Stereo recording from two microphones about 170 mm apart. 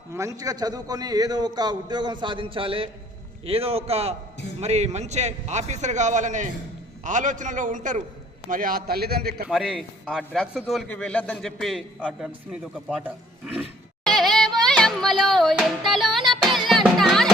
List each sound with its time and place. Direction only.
0.1 s a man's voice: 20° right (ahead or behind); by 9.5 s 65° right (ahead or behind)
9.5 s a man's voice: centre (ahead or behind)
14.0 s music: centre (ahead or behind)